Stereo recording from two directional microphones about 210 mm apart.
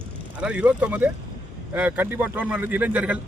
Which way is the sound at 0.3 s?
5° right (ahead or behind).